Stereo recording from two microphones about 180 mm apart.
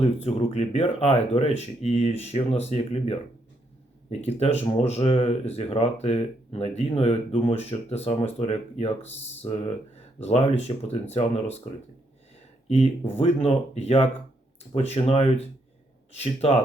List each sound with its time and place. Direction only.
0.0 s speech: 35° left (ahead or behind)
9.0 s speech: 90° left
10.2 s speech: 35° left (ahead or behind)
12.6 s speech: 35° left (ahead or behind)